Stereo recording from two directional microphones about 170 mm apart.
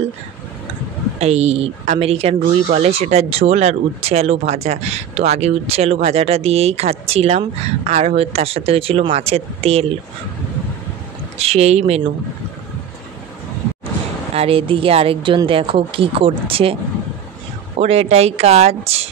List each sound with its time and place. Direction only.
1.2 s speech: 40° right (ahead or behind)
11.3 s speech: 35° right (ahead or behind)
14.3 s speech: 35° right (ahead or behind)
17.7 s speech: 35° right (ahead or behind)